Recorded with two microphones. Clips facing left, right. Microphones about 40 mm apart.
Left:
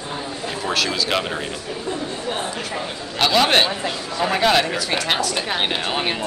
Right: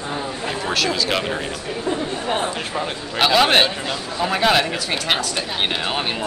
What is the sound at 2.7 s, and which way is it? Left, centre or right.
A man's voice, centre.